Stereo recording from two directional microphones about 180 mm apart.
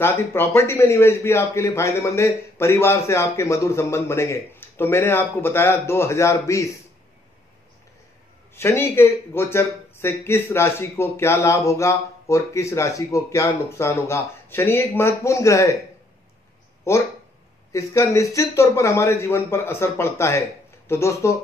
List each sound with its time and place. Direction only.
0.0 s speech: 10° left (ahead or behind)
8.5 s speech: 15° left (ahead or behind)
16.9 s speech: 15° left (ahead or behind)